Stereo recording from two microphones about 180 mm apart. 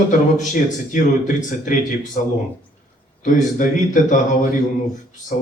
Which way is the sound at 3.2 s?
45° left (ahead or behind).